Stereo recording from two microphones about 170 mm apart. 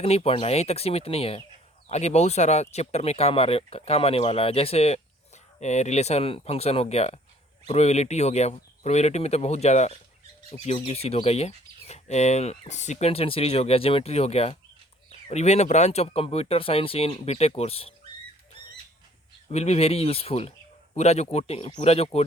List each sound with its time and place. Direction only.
0.0 s speech: 35° left (ahead or behind)
19.5 s speech: 40° left (ahead or behind)